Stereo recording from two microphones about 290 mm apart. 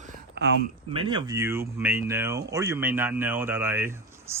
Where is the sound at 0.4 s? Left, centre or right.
Right.